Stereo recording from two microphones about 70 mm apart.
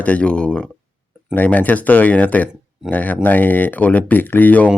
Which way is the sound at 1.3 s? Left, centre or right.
Left.